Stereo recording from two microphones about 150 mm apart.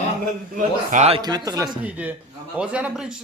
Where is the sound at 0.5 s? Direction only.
55° right (ahead or behind).